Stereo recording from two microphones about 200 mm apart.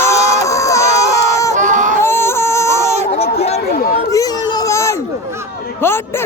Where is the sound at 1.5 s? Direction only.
40° right (ahead or behind).